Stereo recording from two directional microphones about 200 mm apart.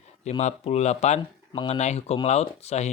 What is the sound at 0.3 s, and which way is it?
Speech, 35° left (ahead or behind).